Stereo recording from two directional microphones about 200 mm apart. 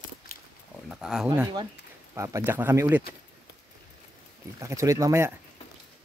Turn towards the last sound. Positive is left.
turn(degrees=-15)  # may be behind; listen again after turning